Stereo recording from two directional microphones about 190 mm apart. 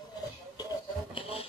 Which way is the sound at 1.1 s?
30° left (ahead or behind).